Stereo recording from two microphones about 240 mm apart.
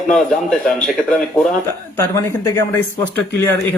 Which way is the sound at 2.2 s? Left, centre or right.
Centre.